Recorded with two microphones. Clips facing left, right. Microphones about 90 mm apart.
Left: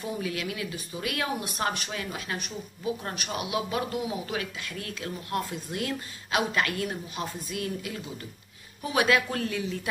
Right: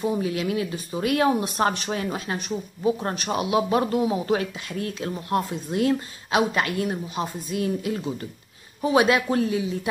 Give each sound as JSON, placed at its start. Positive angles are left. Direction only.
{"t": 0.0, "sound": "speech", "side_deg": -25}